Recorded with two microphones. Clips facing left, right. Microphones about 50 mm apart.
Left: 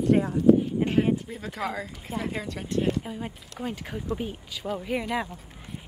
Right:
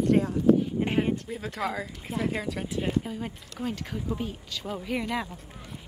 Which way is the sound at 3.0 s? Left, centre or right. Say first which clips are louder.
Even; centre.